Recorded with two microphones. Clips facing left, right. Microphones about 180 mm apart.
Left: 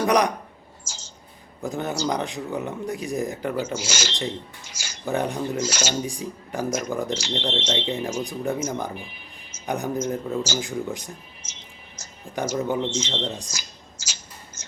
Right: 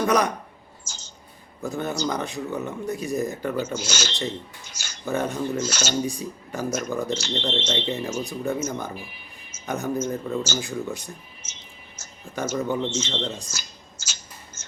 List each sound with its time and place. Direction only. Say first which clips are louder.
0.0 s speech: left 1 dB; 15° left (ahead or behind)
0.9 s a sound: left 2 dB; 90° left
1.6 s speech: left 1 dB; 15° left (ahead or behind)
11.9 s music: left 2 dB; 15° left (ahead or behind)
12.6 s speech: left 1 dB; 20° left (ahead or behind)